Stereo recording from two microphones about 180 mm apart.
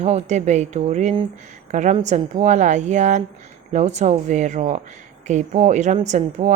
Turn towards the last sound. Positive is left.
turn(degrees=-40)  # may be behind; listen again after turning